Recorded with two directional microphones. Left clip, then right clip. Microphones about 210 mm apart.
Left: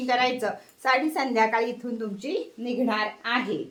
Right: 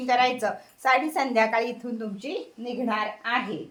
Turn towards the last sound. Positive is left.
turn(degrees=15)  # may be behind; listen again after turning